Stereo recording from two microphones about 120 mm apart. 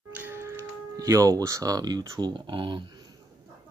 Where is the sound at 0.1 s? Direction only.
15° right (ahead or behind); by 3.1 s 40° right (ahead or behind).